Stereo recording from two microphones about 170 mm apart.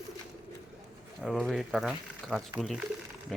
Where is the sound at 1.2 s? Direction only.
Centre (ahead or behind).